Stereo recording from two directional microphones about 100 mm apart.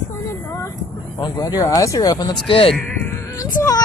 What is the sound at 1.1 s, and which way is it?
Speech, 40° left (ahead or behind).